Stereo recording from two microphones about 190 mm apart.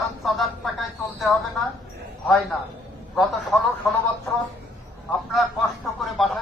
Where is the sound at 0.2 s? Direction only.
Centre (ahead or behind).